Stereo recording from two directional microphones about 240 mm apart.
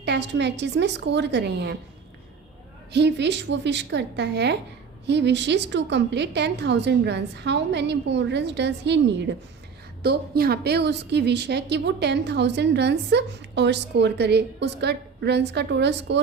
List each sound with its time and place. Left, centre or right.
0.0 s a woman's voice: right
2.9 s a woman's voice: right